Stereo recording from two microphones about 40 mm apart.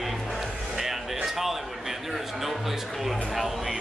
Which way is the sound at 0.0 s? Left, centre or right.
Centre.